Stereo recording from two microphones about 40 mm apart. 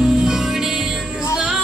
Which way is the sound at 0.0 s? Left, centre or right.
Centre.